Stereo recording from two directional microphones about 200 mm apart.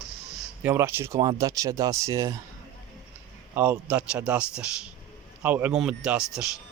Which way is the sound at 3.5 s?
10° right (ahead or behind).